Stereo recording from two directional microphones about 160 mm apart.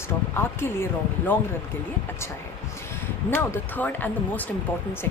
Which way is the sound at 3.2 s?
10° left (ahead or behind).